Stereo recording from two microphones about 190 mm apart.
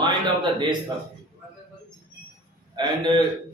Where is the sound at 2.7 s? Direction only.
25° right (ahead or behind).